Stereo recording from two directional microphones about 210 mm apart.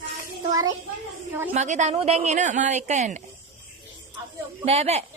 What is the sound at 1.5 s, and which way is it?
Speech, 35° right (ahead or behind).